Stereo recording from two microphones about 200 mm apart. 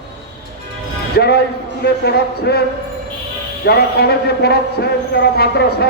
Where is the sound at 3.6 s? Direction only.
50° left (ahead or behind).